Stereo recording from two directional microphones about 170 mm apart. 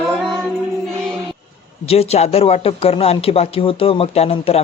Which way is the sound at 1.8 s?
35° left (ahead or behind).